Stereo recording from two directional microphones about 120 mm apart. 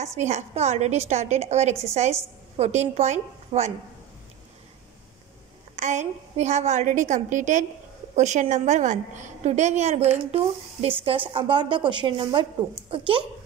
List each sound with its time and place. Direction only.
0.0 s a woman's voice: 75° right (ahead or behind)
5.8 s a woman's voice: 80° right; by 13.2 s 45° right (ahead or behind)